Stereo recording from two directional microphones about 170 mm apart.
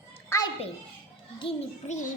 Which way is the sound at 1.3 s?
30° left (ahead or behind).